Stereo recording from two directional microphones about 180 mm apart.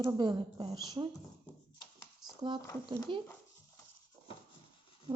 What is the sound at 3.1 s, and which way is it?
Speech, 30° right (ahead or behind).